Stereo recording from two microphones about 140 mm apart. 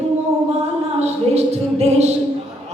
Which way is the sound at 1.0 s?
50° right (ahead or behind).